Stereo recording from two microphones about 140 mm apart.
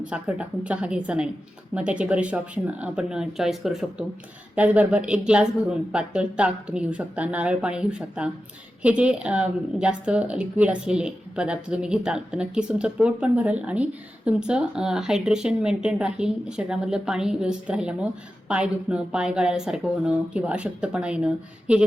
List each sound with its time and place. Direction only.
0.1 s a woman's voice: 10° right (ahead or behind)